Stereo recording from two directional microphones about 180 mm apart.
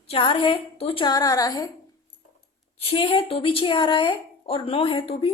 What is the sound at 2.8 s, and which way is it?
A woman's voice, 30° left (ahead or behind).